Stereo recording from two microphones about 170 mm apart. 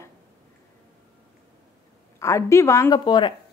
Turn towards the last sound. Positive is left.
turn(degrees=25)  # may be behind; listen again after turning